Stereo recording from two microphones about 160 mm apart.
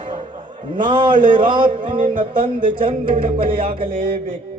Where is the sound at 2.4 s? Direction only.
35° right (ahead or behind).